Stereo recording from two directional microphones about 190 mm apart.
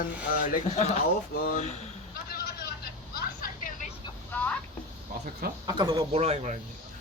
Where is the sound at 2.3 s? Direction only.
55° left (ahead or behind).